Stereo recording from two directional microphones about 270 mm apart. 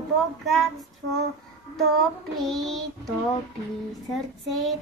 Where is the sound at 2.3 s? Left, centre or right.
Centre.